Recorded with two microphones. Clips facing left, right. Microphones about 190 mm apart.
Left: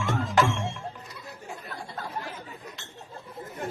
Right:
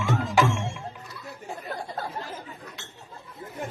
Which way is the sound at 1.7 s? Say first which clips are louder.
Right 6 dB; 40° right (ahead or behind).